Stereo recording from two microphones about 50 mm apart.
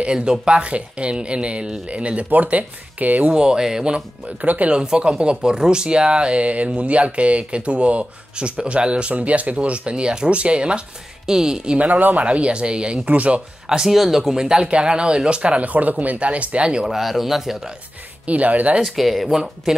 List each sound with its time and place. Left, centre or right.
0.0 s speech: centre
3.3 s speech: centre
11.8 s speech: right
12.3 s speech: right
13.7 s speech: centre
16.9 s speech: centre
18.2 s speech: right
18.9 s speech: centre